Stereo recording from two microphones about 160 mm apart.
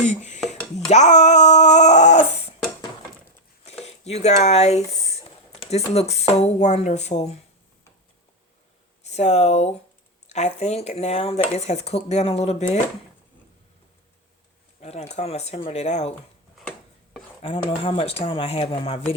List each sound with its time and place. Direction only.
0.0 s dishes: 50° left (ahead or behind)
0.9 s a sound: 45° left (ahead or behind)
3.8 s speech: 45° left (ahead or behind)
9.0 s speech: 45° left (ahead or behind)
14.8 s speech: 40° left (ahead or behind)
17.4 s speech: 35° left (ahead or behind)